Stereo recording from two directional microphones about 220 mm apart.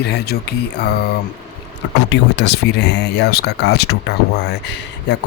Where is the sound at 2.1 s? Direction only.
50° left (ahead or behind).